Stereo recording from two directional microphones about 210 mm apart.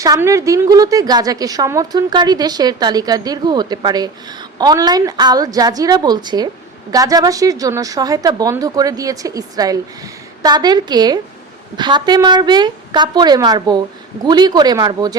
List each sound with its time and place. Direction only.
0.0 s a woman's voice: 15° right (ahead or behind)